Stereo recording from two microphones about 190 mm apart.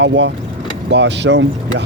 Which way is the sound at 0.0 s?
70° right (ahead or behind).